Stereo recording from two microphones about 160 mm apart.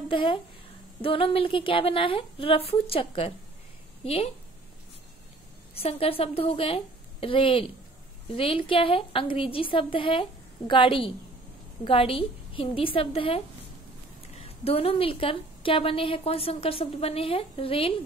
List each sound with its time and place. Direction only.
0.1 s a woman's voice: 30° left (ahead or behind)
5.8 s a woman's voice: 35° left (ahead or behind)